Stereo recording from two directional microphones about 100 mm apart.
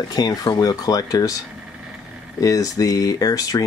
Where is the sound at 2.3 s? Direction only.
35° left (ahead or behind).